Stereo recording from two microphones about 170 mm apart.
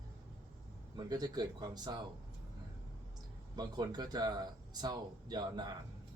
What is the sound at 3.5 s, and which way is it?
Speech, 25° right (ahead or behind).